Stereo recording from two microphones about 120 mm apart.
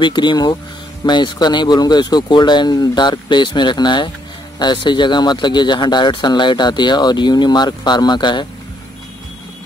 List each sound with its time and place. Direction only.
0.0 s speech: 40° left (ahead or behind)